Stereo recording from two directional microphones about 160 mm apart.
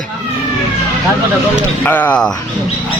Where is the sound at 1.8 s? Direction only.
10° left (ahead or behind).